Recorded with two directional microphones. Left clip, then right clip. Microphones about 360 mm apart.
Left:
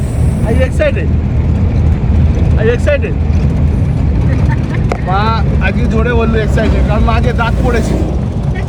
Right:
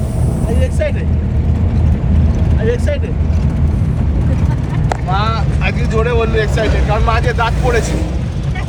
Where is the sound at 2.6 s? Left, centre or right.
Centre.